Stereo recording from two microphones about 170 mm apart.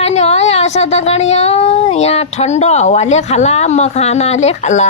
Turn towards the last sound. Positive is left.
turn(degrees=40)  # may be behind; listen again after turning